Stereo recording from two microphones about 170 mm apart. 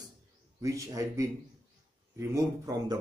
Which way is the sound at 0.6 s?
20° right (ahead or behind).